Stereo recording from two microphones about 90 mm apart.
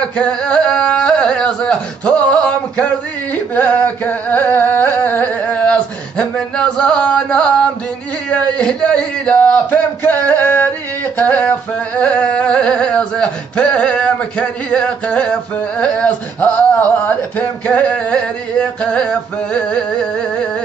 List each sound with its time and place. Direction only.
0.0 s speech: 10° left (ahead or behind)
3.5 s carnatic music: 20° left (ahead or behind)
6.3 s speech: 10° left (ahead or behind)
11.1 s a sound: 20° left (ahead or behind)
12.0 s speech: 10° left (ahead or behind)